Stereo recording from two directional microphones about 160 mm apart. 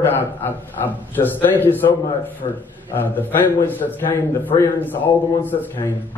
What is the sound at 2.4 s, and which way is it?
Speech, 35° left (ahead or behind).